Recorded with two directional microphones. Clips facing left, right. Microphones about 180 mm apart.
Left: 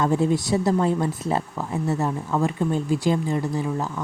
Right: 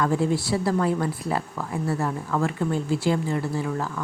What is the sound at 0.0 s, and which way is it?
A woman's voice, 20° left (ahead or behind).